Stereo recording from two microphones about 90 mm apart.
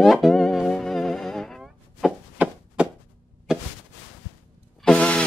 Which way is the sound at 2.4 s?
15° right (ahead or behind).